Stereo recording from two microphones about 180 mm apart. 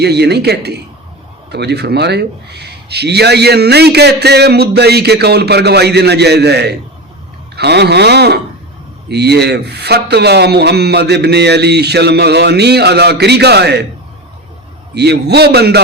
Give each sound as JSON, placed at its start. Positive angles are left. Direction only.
{"t": 0.0, "sound": "speech", "side_deg": -65}
{"t": 14.9, "sound": "speech", "side_deg": -65}